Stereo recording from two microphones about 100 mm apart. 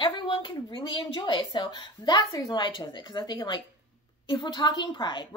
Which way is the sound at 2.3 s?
40° left (ahead or behind).